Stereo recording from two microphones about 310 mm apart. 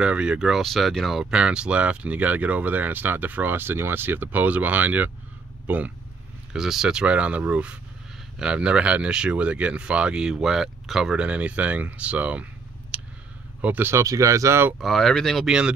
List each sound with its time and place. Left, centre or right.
0.0 s speech: centre
12.9 s a sound: centre
13.6 s speech: centre